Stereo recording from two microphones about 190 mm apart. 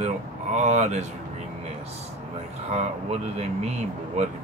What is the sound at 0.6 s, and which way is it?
Speech, 40° right (ahead or behind).